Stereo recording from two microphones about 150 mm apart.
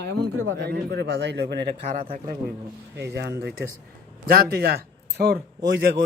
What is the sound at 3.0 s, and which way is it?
A man's voice, 90° right.